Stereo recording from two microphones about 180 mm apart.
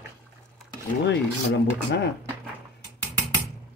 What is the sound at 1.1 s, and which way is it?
Rub, 75° left (ahead or behind).